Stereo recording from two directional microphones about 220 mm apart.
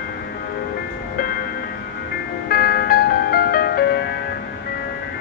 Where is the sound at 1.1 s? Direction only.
40° left (ahead or behind).